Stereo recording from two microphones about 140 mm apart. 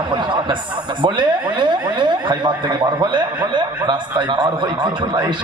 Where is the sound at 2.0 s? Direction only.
35° right (ahead or behind).